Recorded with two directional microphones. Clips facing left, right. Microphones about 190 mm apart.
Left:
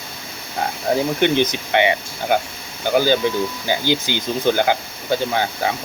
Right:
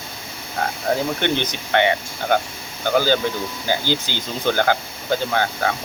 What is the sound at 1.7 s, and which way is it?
Speech, 15° left (ahead or behind).